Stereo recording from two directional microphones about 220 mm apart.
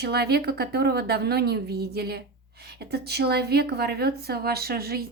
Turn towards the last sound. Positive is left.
turn(degrees=-45)  # may be behind; listen again after turning